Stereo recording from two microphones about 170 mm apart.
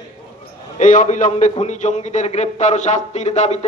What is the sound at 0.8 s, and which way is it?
A man's voice, 50° left (ahead or behind).